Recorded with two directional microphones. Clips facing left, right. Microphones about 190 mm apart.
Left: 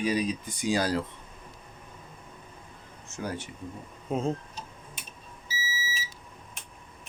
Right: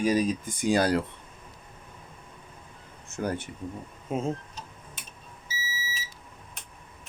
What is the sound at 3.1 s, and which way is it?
Speech, 55° right (ahead or behind).